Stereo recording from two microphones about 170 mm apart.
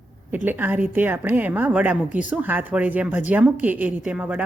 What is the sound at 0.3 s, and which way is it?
A woman's voice, 10° right (ahead or behind).